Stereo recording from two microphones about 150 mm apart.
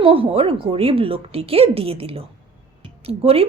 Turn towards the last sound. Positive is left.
turn(degrees=-40)  # may be behind; listen again after turning